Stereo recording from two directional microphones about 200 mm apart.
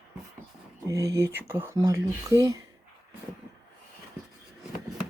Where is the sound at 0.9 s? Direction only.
15° right (ahead or behind).